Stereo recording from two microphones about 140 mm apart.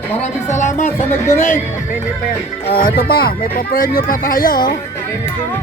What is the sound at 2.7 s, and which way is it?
Speech, 90° left.